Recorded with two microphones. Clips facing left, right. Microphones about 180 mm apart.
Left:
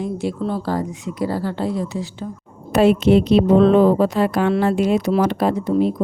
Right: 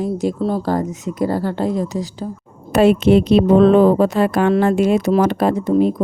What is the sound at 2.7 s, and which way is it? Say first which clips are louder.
A woman's voice: right 2 dB; 55° right (ahead or behind).